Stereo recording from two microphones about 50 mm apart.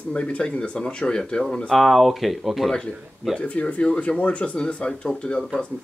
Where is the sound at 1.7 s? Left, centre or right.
Centre.